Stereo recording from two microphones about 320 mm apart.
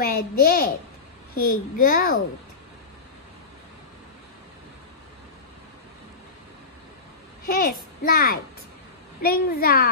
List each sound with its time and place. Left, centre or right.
0.0 s a child's voice: left
7.4 s a child's voice: left